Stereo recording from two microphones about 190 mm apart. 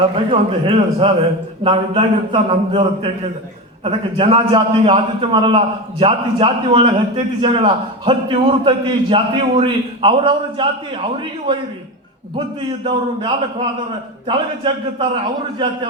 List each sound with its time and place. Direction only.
0.3 s a man's voice: 30° right (ahead or behind)
12.8 s a man's voice: 25° right (ahead or behind)